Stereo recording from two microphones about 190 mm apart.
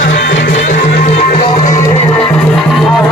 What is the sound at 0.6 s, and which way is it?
Music, 40° left (ahead or behind).